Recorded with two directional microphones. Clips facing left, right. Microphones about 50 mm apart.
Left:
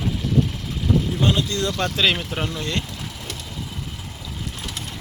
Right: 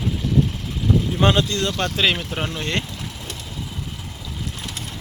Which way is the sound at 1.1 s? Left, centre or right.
Right.